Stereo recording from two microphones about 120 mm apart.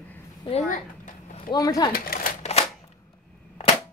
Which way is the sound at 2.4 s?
60° left (ahead or behind).